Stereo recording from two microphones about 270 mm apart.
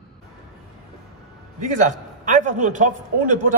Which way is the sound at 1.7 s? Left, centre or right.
Right.